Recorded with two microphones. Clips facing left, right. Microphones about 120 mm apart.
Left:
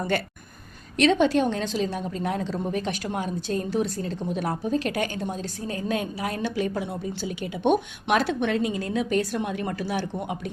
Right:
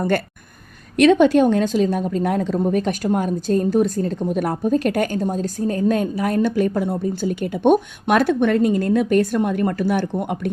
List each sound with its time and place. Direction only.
0.9 s a woman's voice: 50° right (ahead or behind)